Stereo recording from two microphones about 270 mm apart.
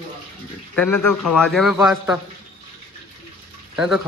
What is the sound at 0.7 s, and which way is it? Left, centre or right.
Speech, centre.